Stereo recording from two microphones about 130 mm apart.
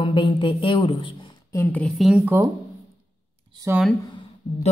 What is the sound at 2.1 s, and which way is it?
Speech, 15° right (ahead or behind).